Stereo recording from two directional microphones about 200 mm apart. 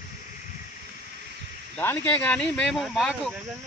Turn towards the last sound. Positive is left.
turn(degrees=0)  # may be behind; listen again after turning